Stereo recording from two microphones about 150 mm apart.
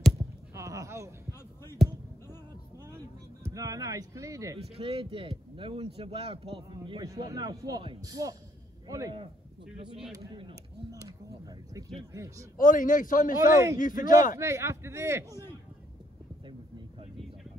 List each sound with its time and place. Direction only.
0.6 s a sound: 20° right (ahead or behind)
3.4 s speech: 20° right (ahead or behind)
4.7 s speech: 40° right (ahead or behind); by 9.1 s 20° right (ahead or behind)
10.9 s a sound: 25° right (ahead or behind)
12.1 s speech: 20° right (ahead or behind)
12.5 s a man's voice: 60° left (ahead or behind)
13.4 s speech: 20° right (ahead or behind)
13.7 s a man's voice: 60° left (ahead or behind)
14.4 s speech: 20° right (ahead or behind)